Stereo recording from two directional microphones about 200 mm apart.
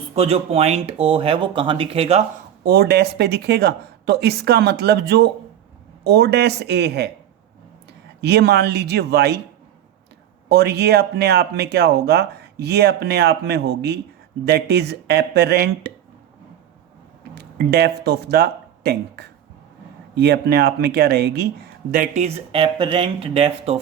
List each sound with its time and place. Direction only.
0.1 s speech: 30° right (ahead or behind)
2.6 s speech: 55° right (ahead or behind)
8.2 s speech: 55° right (ahead or behind)
10.5 s speech: 55° right (ahead or behind)
17.3 s speech: 55° right (ahead or behind)
21.9 s speech: 35° right (ahead or behind)